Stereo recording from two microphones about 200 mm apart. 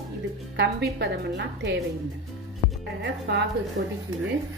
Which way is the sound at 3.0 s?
60° right (ahead or behind).